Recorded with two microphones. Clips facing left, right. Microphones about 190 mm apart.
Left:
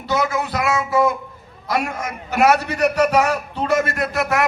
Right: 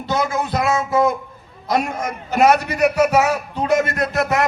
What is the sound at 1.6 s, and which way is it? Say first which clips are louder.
A man's voice: right 2 dB; 20° right (ahead or behind).